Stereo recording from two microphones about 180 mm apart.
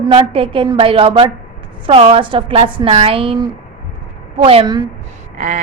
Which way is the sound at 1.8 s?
30° right (ahead or behind).